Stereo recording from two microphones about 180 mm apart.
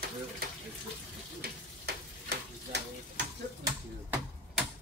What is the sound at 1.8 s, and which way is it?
Stir, 60° right (ahead or behind).